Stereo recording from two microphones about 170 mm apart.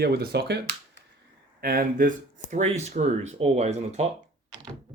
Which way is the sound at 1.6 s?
60° right (ahead or behind).